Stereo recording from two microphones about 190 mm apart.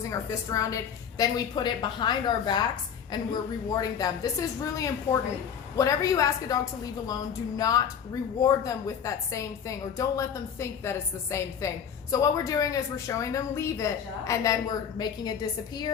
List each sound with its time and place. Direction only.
0.1 s a woman's voice: 15° left (ahead or behind)